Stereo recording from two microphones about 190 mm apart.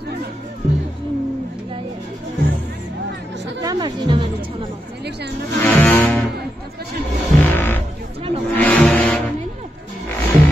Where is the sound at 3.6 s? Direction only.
25° right (ahead or behind).